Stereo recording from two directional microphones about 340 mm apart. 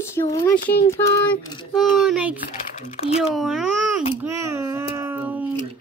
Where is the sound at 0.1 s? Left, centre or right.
Centre.